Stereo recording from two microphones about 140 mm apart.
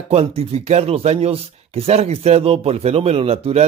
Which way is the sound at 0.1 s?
45° right (ahead or behind).